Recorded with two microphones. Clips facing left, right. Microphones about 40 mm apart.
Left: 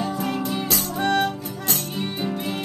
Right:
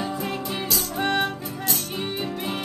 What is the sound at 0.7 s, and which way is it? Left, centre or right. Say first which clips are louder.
Music: left 2 dB; left.